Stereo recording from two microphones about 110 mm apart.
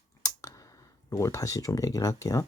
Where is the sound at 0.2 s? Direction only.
30° left (ahead or behind).